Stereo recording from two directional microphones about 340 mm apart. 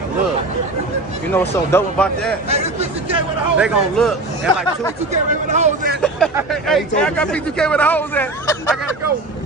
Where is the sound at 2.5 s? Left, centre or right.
Centre.